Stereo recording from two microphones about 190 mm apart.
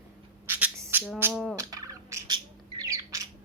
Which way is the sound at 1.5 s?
20° right (ahead or behind).